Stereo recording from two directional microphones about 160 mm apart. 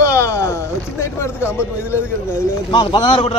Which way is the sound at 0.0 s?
20° left (ahead or behind).